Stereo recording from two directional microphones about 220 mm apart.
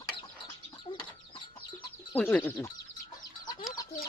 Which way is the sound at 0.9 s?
20° left (ahead or behind).